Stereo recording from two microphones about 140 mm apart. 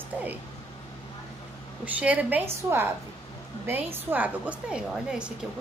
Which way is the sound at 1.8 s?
10° right (ahead or behind).